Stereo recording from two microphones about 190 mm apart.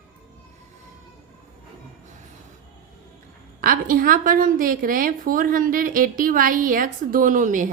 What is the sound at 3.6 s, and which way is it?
A woman's voice, 45° right (ahead or behind).